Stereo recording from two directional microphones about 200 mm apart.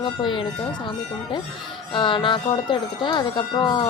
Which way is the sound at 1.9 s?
25° left (ahead or behind).